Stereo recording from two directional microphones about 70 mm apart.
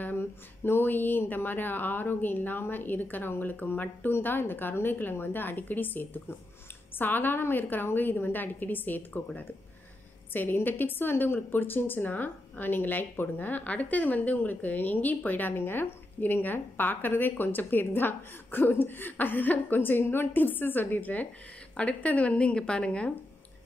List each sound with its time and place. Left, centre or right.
0.7 s a woman's voice: left